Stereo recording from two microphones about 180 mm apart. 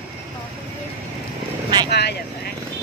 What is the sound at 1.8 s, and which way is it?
Speech, 65° left (ahead or behind).